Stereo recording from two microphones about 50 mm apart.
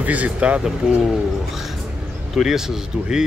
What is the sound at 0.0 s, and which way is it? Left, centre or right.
Speech, right.